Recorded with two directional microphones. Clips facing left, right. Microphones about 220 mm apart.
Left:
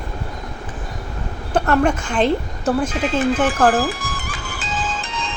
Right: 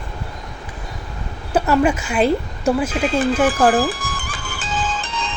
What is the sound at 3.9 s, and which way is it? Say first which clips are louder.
Music: even; 30° right (ahead or behind).